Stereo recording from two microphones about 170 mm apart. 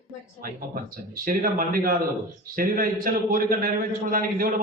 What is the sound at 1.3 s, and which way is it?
A man's voice, 55° right (ahead or behind).